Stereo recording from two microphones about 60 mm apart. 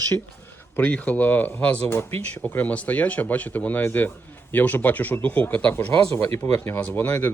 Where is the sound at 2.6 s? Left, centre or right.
Left.